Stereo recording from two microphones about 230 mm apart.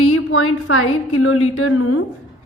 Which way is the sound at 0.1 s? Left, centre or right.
Left.